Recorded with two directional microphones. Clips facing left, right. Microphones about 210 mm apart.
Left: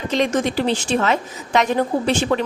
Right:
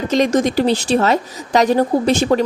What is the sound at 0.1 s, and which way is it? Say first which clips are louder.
A woman's voice: right 4 dB; 40° right (ahead or behind).